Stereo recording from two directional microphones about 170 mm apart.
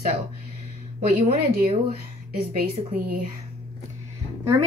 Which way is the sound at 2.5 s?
60° right (ahead or behind).